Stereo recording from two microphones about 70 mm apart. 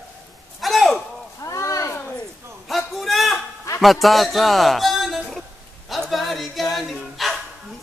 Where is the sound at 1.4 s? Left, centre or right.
Left.